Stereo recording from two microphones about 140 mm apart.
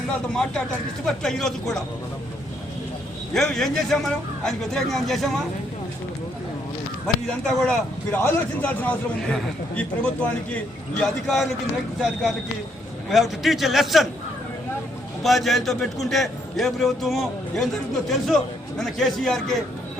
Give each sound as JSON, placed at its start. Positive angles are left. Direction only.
{"t": 1.0, "sound": "a man's voice", "side_deg": 5}
{"t": 3.3, "sound": "a man's voice", "side_deg": 5}
{"t": 7.3, "sound": "a man's voice", "side_deg": 5}
{"t": 15.2, "sound": "a man's voice", "side_deg": 0}
{"t": 18.8, "sound": "a man's voice", "side_deg": 0}